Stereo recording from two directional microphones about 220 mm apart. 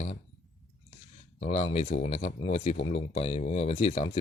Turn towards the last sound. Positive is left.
turn(degrees=25)  # may be behind; listen again after turning